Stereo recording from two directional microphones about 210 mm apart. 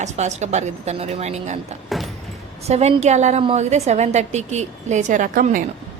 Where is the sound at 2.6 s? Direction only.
30° right (ahead or behind).